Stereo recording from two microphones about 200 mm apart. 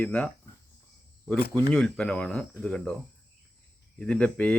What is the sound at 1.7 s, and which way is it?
Speech, 5° left (ahead or behind).